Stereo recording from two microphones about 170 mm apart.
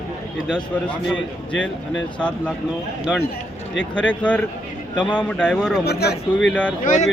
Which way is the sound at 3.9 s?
5° left (ahead or behind).